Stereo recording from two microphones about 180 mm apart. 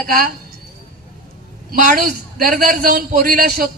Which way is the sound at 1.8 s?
55° right (ahead or behind).